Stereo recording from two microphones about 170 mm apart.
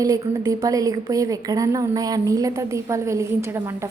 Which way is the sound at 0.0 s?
20° right (ahead or behind).